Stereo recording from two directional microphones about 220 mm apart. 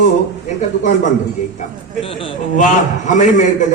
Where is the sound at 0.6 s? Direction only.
35° left (ahead or behind).